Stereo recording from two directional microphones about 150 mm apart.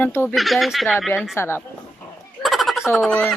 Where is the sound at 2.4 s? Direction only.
Centre (ahead or behind).